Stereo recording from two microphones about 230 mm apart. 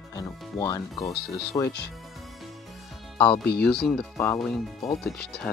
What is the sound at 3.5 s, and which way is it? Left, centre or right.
Speech, left.